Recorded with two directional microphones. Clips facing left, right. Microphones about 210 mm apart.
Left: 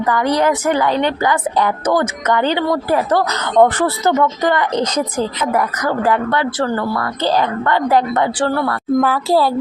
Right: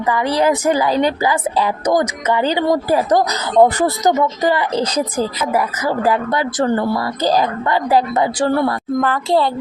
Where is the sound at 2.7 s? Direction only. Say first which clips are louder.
Right 1 dB; 15° right (ahead or behind).